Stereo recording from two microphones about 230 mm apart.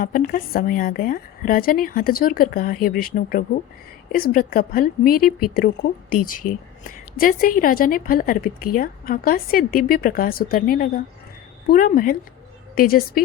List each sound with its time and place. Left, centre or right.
0.0 s a woman's voice: left